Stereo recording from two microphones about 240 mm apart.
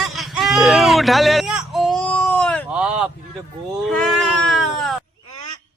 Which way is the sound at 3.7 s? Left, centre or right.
Centre.